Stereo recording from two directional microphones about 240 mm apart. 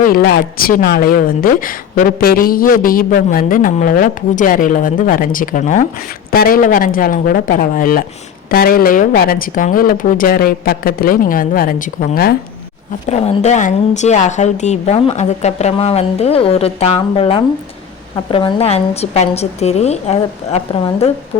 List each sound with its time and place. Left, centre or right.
0.0 s a woman's voice: left
13.1 s a woman's voice: left